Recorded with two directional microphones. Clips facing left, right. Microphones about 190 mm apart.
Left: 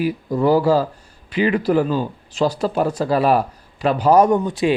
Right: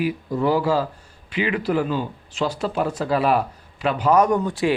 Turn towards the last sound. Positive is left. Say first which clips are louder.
# left 2 dB
turn(degrees=20)  # may be behind; listen again after turning